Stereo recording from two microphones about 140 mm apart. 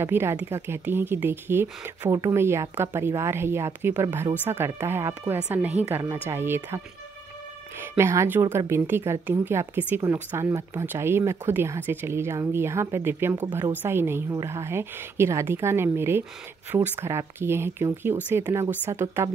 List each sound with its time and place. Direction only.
0.0 s speech: 15° right (ahead or behind)
7.8 s speech: 15° right (ahead or behind)